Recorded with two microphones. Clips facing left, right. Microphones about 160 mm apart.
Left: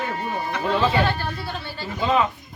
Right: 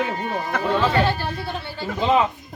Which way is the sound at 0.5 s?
50° right (ahead or behind).